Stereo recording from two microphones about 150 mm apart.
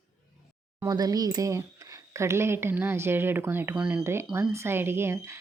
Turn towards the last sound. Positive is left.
turn(degrees=-15)  # may be behind; listen again after turning